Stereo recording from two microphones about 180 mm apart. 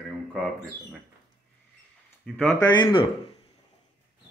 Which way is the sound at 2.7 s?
25° left (ahead or behind).